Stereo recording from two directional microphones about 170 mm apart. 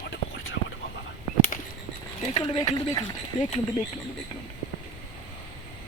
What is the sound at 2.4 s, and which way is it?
Speech, 25° left (ahead or behind).